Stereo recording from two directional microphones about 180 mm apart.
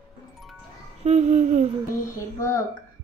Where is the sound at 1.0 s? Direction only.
40° right (ahead or behind).